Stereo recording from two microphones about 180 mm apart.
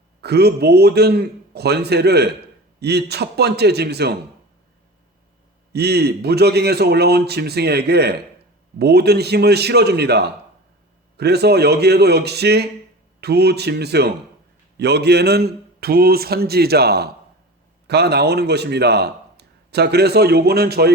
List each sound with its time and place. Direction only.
0.2 s a man's voice: 65° right (ahead or behind)
5.7 s a man's voice: 65° right (ahead or behind)